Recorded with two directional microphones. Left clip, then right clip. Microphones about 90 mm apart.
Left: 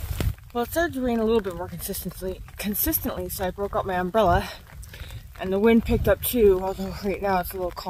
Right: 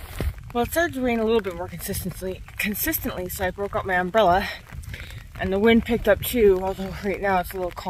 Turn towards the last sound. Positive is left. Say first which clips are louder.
# right 2 dB
turn(degrees=25)  # may be behind; listen again after turning